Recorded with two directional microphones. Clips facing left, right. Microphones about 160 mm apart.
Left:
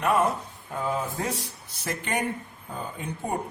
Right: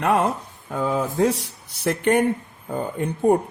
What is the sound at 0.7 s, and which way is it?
Speech, 90° right.